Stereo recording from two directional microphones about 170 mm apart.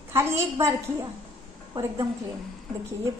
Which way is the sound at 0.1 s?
15° right (ahead or behind).